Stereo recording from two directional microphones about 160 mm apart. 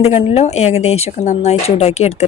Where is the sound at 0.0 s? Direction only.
40° left (ahead or behind).